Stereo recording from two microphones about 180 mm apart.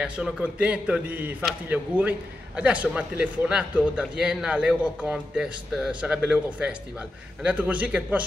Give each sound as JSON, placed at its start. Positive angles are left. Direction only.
{"t": 0.0, "sound": "a man's voice", "side_deg": -5}